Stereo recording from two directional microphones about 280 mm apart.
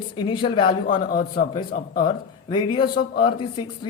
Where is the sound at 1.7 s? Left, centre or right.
Left.